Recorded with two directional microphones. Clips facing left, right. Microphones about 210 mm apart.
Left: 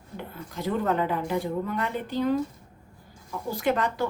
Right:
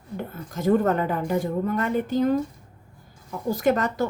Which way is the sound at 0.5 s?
45° right (ahead or behind).